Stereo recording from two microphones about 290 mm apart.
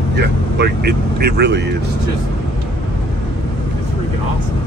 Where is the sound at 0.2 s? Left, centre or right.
Right.